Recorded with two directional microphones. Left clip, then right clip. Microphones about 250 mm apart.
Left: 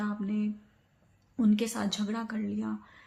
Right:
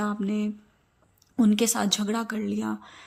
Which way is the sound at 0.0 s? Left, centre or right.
Right.